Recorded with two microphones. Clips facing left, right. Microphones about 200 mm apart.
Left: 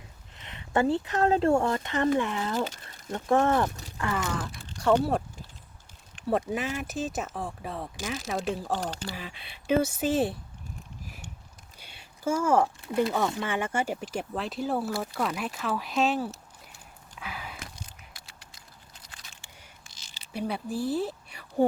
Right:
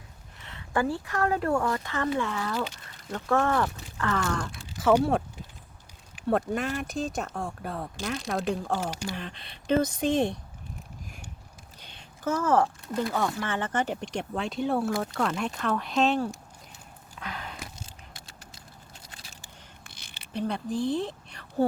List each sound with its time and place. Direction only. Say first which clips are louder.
0.3 s speech: left 2 dB; 20° left (ahead or behind)
2.6 s speech: left 2 dB; 45° left (ahead or behind)
2.8 s speech: left 1 dB; 25° left (ahead or behind); by 8.7 s centre (ahead or behind)
8.8 s speech: right 1 dB; 10° right (ahead or behind)
9.0 s speech: right 3 dB; 5° left (ahead or behind)
11.8 s a sound: left 1 dB; 10° left (ahead or behind)
12.9 s speech: left 2 dB; 20° left (ahead or behind)
17.2 s biting: right 1 dB; 5° left (ahead or behind)
19.0 s biting: even; 25° right (ahead or behind)
19.8 s a sound: right 4 dB; 60° right (ahead or behind)
20.3 s speech: right 2 dB; 5° left (ahead or behind)